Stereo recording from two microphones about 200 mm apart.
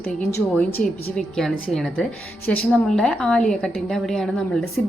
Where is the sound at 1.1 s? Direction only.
Centre (ahead or behind).